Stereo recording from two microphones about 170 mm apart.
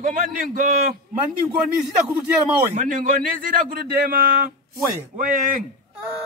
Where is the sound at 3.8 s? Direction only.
65° right (ahead or behind).